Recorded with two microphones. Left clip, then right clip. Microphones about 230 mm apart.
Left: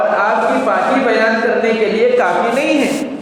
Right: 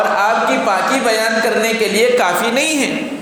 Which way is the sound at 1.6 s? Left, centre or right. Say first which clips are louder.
Left 1 dB; right.